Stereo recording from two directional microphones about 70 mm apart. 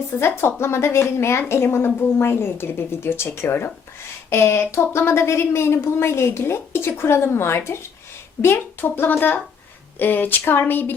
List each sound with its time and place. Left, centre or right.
0.2 s a woman's voice: left